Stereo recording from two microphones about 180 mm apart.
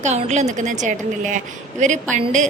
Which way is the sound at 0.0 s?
40° right (ahead or behind).